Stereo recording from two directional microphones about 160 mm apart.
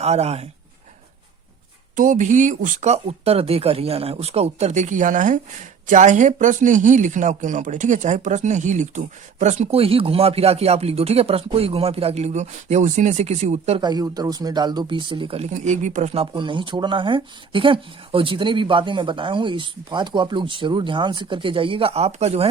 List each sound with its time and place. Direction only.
0.0 s speech: 40° right (ahead or behind)
2.0 s speech: 50° right (ahead or behind)
13.8 s speech: 25° right (ahead or behind); by 22.4 s 40° right (ahead or behind)